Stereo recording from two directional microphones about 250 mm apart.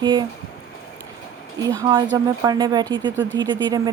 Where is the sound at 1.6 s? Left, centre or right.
Centre.